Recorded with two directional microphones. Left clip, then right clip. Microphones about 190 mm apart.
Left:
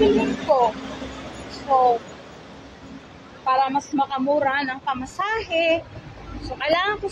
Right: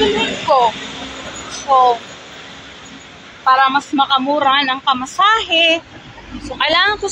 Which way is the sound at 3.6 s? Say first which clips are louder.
Right 8 dB; 5° left (ahead or behind).